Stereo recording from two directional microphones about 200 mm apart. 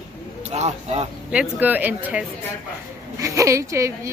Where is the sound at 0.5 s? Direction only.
35° right (ahead or behind).